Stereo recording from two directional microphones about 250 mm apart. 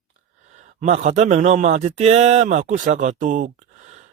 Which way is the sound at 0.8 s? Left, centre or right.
Right.